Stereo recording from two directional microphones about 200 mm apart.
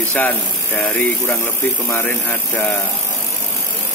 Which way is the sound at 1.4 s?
10° left (ahead or behind).